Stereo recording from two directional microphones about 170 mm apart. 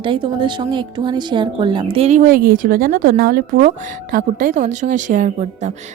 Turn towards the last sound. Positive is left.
turn(degrees=-45)  # may be behind; listen again after turning